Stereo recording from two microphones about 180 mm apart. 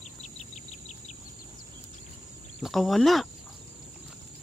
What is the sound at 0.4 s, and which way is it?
Bird, 40° left (ahead or behind).